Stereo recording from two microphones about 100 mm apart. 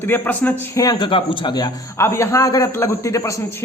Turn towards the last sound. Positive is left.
turn(degrees=30)  # may be behind; listen again after turning